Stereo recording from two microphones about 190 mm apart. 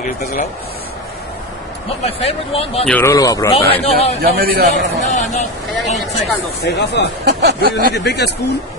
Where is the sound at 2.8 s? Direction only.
10° left (ahead or behind).